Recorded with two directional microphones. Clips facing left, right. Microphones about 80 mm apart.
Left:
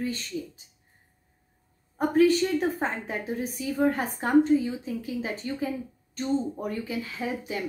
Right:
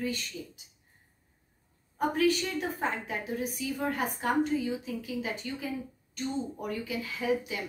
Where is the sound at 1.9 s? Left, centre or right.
Left.